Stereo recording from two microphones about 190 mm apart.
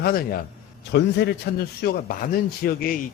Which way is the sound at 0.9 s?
65° left (ahead or behind).